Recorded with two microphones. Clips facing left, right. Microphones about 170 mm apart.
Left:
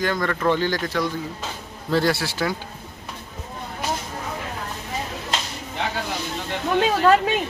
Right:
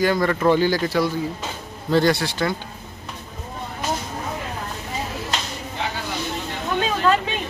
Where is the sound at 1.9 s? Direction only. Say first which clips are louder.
Right 3 dB; 5° left (ahead or behind).